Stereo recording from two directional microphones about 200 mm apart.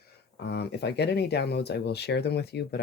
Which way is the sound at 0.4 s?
55° left (ahead or behind).